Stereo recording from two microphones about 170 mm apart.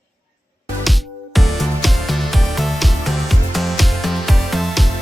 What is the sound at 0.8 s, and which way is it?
Music, centre (ahead or behind).